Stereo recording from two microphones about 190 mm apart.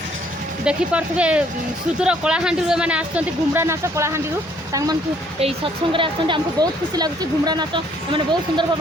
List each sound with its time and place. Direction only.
0.6 s speech: 5° right (ahead or behind)
5.4 s speech: 30° right (ahead or behind)